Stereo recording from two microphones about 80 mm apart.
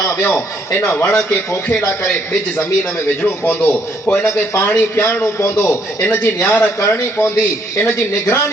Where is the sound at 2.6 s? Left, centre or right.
Left.